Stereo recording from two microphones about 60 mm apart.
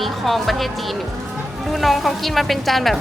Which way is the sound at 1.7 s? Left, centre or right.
Centre.